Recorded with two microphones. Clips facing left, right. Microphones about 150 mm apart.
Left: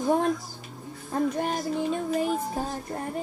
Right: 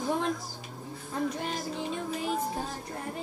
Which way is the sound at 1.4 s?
50° left (ahead or behind).